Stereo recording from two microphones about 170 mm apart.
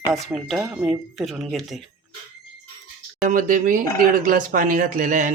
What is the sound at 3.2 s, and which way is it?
Speech, 50° right (ahead or behind).